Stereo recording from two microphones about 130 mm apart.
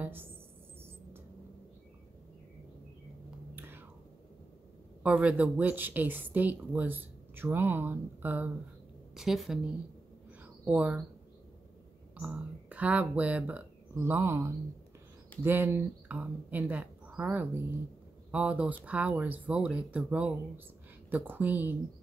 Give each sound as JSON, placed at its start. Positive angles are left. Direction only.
{"t": 0.0, "sound": "speech", "side_deg": -15}
{"t": 3.5, "sound": "whispering", "side_deg": -15}
{"t": 5.0, "sound": "a woman's voice", "side_deg": -10}
{"t": 9.1, "sound": "a woman's voice", "side_deg": 0}
{"t": 12.2, "sound": "a woman's voice", "side_deg": -10}